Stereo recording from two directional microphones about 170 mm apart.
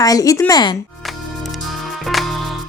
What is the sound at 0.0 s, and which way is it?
Speech, 20° left (ahead or behind).